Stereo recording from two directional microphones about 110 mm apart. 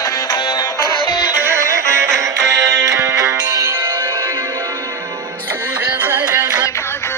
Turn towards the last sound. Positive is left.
turn(degrees=-40)  # may be behind; listen again after turning